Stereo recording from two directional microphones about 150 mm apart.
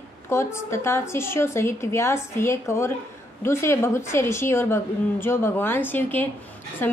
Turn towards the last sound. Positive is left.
turn(degrees=15)  # may be behind; listen again after turning